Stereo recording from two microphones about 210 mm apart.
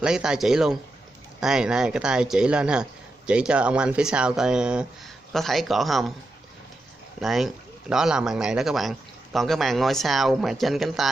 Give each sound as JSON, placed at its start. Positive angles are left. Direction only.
{"t": 0.0, "sound": "a man's voice", "side_deg": -5}
{"t": 7.2, "sound": "a man's voice", "side_deg": 0}